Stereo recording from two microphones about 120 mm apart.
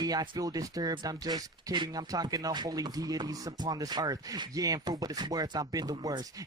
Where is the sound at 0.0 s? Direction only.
30° right (ahead or behind).